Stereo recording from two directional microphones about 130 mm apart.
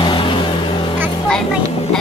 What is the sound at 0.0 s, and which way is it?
Vehicle, 40° left (ahead or behind).